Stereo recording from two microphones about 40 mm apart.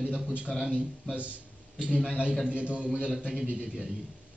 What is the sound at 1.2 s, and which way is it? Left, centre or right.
Speech, right.